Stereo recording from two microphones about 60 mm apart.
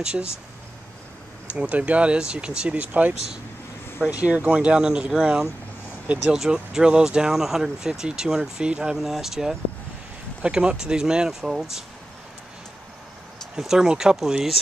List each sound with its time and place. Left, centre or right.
0.1 s speech: centre
1.5 s speech: right
4.0 s speech: centre
13.6 s speech: centre